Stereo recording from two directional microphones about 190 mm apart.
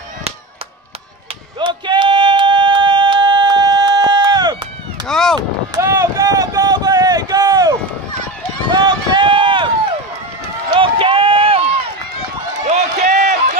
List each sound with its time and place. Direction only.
1.6 s a sound: 25° right (ahead or behind)
5.0 s a sound: 5° left (ahead or behind)
5.8 s run: 15° right (ahead or behind)
8.7 s run: 25° right (ahead or behind)
10.7 s run: 25° right (ahead or behind)
12.6 s run: 40° right (ahead or behind)